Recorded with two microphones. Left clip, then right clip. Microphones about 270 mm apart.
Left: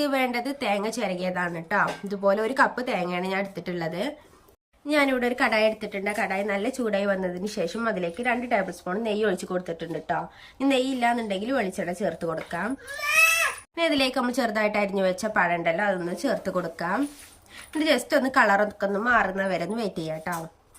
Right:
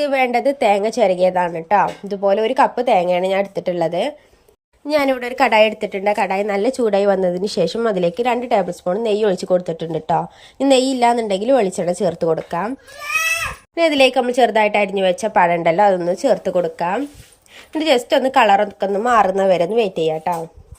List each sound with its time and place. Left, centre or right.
0.0 s a woman's voice: centre
4.9 s a woman's voice: right
13.7 s a woman's voice: centre